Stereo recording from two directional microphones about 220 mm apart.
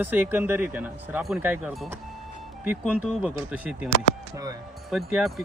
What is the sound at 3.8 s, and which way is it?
Speech, 45° left (ahead or behind).